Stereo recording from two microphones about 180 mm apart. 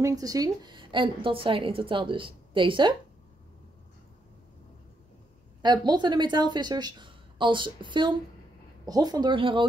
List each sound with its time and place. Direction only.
0.0 s a woman's voice: 20° right (ahead or behind)
5.6 s a woman's voice: 25° right (ahead or behind)